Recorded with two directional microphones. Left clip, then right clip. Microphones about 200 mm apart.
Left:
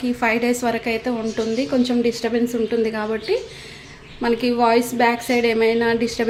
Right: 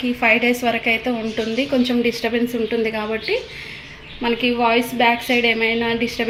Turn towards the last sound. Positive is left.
turn(degrees=15)  # may be behind; listen again after turning